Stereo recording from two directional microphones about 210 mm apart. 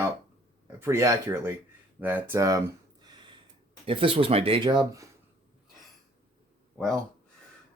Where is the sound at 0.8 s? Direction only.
15° right (ahead or behind).